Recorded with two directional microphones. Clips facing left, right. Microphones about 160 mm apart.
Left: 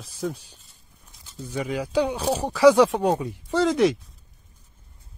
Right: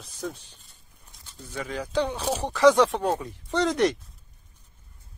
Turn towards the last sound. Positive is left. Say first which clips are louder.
# left 3 dB
turn(degrees=0)  # may be behind; listen again after turning